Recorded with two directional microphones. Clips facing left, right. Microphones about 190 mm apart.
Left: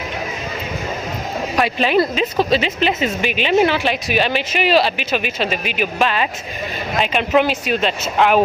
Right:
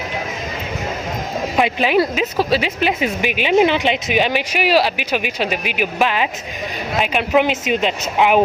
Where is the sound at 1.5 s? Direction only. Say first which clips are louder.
Even; 15° right (ahead or behind).